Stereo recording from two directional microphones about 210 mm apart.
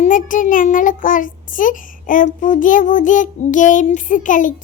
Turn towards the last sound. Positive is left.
turn(degrees=40)  # may be behind; listen again after turning